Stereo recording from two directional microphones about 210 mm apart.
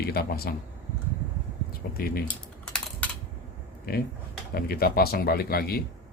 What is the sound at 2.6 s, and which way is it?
Typing, 5° left (ahead or behind).